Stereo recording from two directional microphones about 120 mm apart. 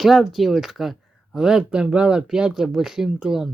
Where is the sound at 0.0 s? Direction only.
Centre (ahead or behind).